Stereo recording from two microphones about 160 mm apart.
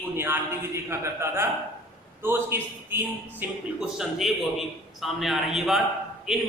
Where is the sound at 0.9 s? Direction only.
15° right (ahead or behind).